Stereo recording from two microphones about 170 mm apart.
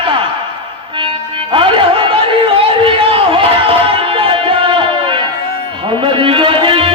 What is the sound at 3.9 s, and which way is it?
Music, 30° right (ahead or behind).